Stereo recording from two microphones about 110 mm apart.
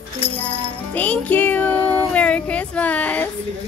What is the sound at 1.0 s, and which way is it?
Music, 15° left (ahead or behind).